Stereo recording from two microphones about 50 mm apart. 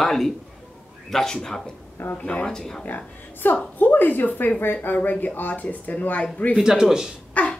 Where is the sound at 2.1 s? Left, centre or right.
Left.